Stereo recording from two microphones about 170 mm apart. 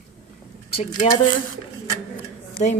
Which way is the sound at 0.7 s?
35° left (ahead or behind).